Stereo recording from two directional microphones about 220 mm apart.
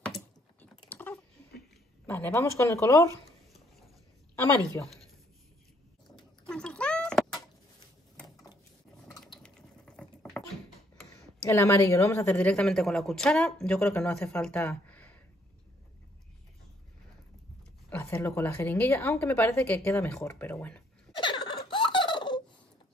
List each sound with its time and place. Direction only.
0.1 s typing: 5° left (ahead or behind)
2.0 s a woman's voice: 10° left (ahead or behind)
4.4 s a woman's voice: 10° left (ahead or behind)
6.1 s cat: 5° left (ahead or behind)
9.4 s water: 5° left (ahead or behind)
11.4 s a woman's voice: 10° left (ahead or behind)
17.8 s a woman's voice: 10° left (ahead or behind)
21.2 s giggle: 20° left (ahead or behind)